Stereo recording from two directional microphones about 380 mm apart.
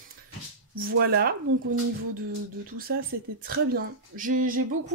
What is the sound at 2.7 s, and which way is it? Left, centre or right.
Speech, right.